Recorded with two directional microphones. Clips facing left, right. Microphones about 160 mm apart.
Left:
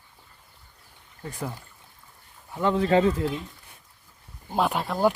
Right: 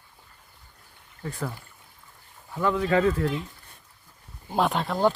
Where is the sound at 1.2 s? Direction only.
15° left (ahead or behind).